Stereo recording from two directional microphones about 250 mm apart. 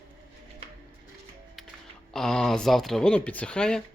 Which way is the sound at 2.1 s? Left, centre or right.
Centre.